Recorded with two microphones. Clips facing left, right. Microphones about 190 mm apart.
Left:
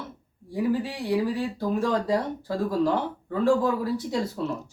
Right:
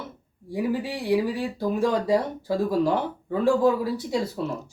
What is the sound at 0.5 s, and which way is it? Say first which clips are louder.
Speech: even; 10° right (ahead or behind).